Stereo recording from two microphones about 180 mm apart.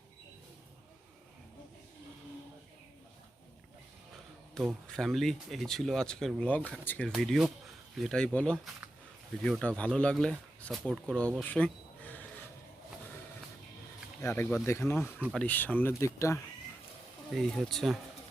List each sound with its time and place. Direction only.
4.5 s speech: centre (ahead or behind)
14.2 s speech: 15° left (ahead or behind)
17.3 s speech: centre (ahead or behind)